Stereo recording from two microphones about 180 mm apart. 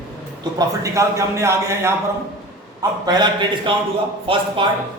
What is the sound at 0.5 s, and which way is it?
A man's voice, 15° right (ahead or behind).